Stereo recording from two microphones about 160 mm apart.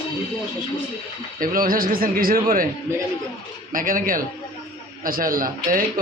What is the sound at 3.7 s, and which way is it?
Speech, 60° right (ahead or behind).